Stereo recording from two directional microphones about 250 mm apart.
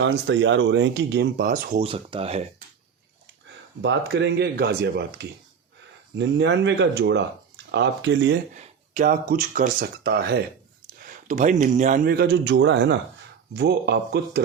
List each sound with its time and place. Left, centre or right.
0.0 s speech: right
3.8 s speech: right
8.5 s speech: right